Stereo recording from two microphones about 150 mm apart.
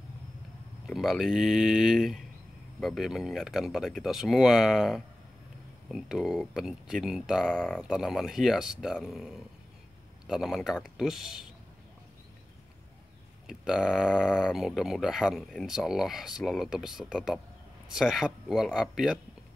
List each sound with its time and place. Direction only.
0.8 s speech: centre (ahead or behind)
13.5 s speech: centre (ahead or behind)